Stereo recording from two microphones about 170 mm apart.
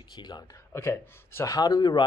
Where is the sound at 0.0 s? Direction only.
25° left (ahead or behind).